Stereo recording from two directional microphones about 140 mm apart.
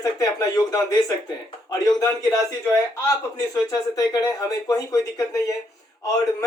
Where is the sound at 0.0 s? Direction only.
25° left (ahead or behind).